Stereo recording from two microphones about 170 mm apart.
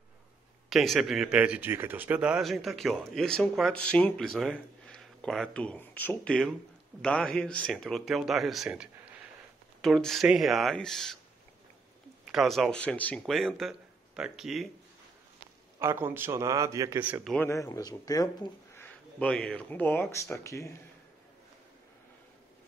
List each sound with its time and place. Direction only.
0.7 s speech: centre (ahead or behind)
12.3 s speech: centre (ahead or behind)
15.8 s speech: 15° right (ahead or behind)
17.0 s speech: 5° right (ahead or behind)
17.5 s speech: 20° left (ahead or behind)
19.1 s speech: 5° left (ahead or behind)